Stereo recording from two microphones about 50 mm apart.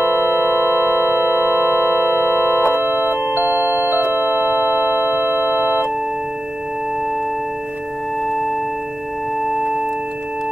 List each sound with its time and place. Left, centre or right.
0.0 s a sound: left
3.3 s music: right
4.3 s tubular bells: right
5.3 s organ: left